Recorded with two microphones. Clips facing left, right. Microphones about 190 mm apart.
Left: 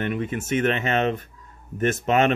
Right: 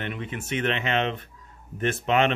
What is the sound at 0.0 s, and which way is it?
Speech, 45° left (ahead or behind).